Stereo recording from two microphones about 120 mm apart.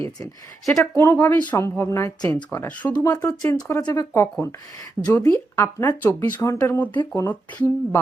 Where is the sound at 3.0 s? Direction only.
30° left (ahead or behind).